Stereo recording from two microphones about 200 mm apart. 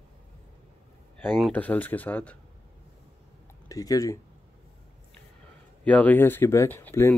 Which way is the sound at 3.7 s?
15° left (ahead or behind).